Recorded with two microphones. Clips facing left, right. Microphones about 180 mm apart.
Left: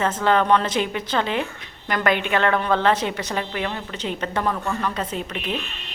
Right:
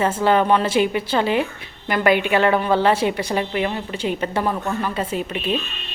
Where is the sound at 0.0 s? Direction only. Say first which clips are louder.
Right 2 dB; 10° right (ahead or behind).